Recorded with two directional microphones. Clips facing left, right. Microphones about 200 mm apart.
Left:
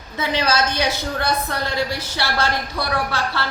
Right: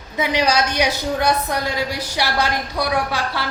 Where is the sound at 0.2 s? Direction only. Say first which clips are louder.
Right 2 dB; 15° right (ahead or behind).